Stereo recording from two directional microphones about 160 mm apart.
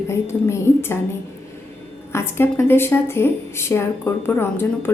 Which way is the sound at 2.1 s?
15° left (ahead or behind).